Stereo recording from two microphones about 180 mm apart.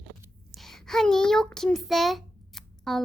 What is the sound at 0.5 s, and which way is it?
A child's voice, centre (ahead or behind).